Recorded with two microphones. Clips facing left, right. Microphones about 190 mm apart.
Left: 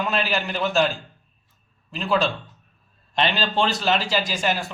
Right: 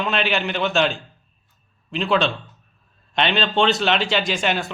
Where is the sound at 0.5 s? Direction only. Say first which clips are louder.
Right 2 dB; 5° left (ahead or behind).